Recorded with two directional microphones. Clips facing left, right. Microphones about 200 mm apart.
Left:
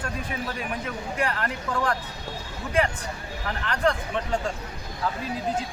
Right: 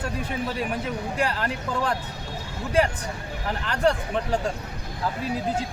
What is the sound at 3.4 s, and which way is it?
Speech, 35° right (ahead or behind).